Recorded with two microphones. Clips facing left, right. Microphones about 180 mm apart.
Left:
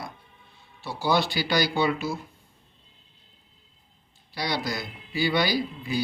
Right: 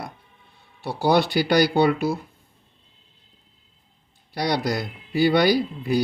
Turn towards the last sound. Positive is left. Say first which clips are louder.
# right 7 dB
turn(degrees=-60)  # may be behind; listen again after turning